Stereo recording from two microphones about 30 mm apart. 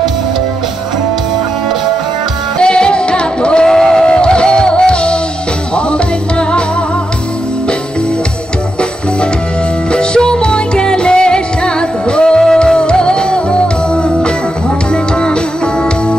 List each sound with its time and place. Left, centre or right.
2.6 s music: left
3.6 s a sound: centre
4.0 s music: left
9.9 s music: left